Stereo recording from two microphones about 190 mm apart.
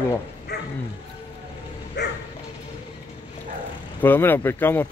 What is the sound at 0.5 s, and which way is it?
Bow-wow, 60° left (ahead or behind).